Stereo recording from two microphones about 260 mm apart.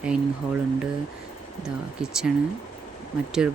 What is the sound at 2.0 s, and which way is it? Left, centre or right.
Speech, centre.